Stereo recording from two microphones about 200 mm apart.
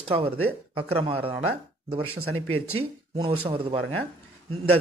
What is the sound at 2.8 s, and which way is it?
A man's voice, 25° right (ahead or behind).